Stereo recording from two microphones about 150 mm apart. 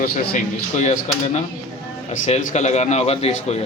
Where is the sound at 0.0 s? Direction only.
55° left (ahead or behind).